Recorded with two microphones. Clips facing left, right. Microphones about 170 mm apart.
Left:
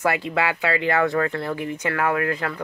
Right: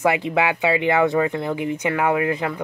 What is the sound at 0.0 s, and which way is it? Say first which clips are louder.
Speech: right 3 dB; 20° right (ahead or behind).